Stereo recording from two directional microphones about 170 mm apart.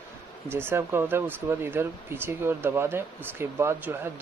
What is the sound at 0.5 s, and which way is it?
Speech, 15° right (ahead or behind).